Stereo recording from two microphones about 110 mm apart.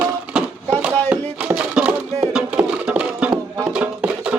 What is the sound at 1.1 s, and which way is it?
Music, 10° right (ahead or behind).